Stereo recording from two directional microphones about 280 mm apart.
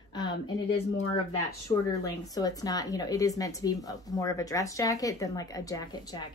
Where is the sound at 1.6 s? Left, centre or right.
Centre.